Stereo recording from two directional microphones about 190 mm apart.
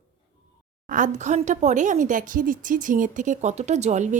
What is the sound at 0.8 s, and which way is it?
Speech, 40° right (ahead or behind).